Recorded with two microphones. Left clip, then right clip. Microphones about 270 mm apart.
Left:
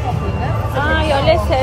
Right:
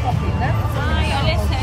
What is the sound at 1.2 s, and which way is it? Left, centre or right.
Speech, centre.